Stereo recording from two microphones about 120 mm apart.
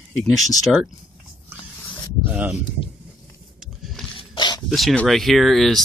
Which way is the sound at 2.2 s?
15° right (ahead or behind).